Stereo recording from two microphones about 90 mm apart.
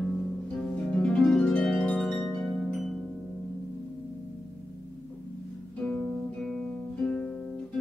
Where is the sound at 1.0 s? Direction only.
5° left (ahead or behind).